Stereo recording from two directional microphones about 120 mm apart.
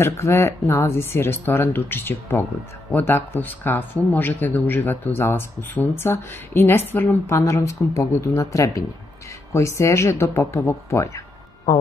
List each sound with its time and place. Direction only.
0.0 s speech: 20° left (ahead or behind)